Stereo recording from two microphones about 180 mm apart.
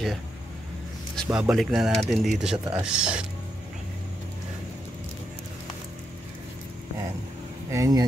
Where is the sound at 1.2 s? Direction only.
15° right (ahead or behind).